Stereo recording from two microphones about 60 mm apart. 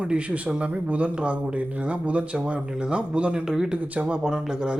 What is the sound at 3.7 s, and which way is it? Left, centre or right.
Speech, right.